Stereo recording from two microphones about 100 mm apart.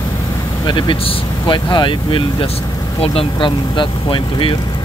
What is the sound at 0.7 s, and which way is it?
Speech, 50° left (ahead or behind).